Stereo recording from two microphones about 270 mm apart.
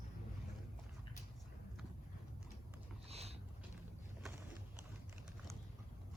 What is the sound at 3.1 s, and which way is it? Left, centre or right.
Boat, right.